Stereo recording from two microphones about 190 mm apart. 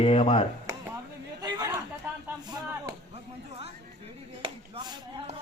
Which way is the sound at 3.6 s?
30° right (ahead or behind).